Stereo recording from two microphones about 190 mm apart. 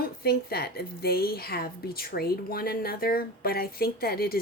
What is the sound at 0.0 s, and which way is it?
A woman's voice, 55° left (ahead or behind).